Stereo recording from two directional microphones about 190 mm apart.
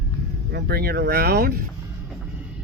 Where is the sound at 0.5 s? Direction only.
55° right (ahead or behind).